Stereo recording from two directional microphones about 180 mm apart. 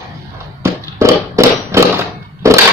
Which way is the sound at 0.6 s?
15° right (ahead or behind).